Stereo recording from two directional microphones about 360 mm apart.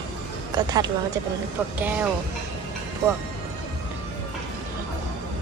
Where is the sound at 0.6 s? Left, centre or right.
Centre.